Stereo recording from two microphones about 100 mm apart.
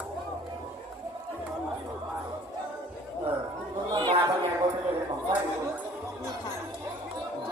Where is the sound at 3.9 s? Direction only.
45° right (ahead or behind).